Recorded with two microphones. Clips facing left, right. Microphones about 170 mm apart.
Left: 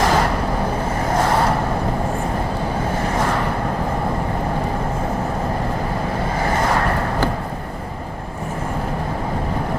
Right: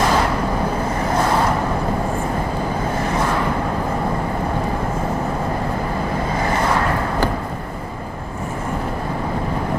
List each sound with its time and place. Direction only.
0.0 s vehicle: 50° left (ahead or behind)